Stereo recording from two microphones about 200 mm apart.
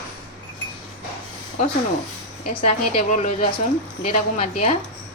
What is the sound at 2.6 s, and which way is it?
A woman's voice, 35° left (ahead or behind).